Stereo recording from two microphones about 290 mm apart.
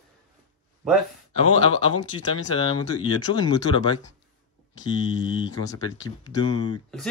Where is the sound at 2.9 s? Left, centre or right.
Left.